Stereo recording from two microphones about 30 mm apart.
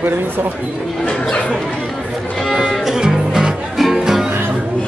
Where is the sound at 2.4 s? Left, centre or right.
Centre.